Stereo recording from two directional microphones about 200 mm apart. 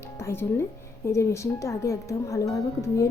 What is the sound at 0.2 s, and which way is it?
A woman's voice, 10° left (ahead or behind).